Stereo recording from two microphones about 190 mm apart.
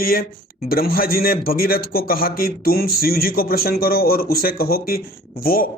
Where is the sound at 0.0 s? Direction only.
50° left (ahead or behind).